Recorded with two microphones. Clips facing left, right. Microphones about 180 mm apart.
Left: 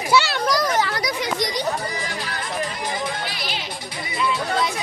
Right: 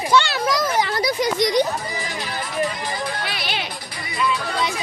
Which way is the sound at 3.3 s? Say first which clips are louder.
Right 2 dB; 65° right (ahead or behind).